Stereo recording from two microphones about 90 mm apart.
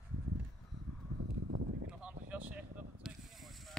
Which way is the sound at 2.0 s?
15° right (ahead or behind).